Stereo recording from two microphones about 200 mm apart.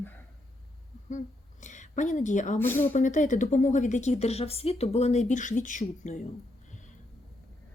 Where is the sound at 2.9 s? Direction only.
40° left (ahead or behind).